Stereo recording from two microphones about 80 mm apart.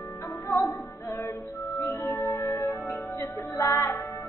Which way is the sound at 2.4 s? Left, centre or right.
Left.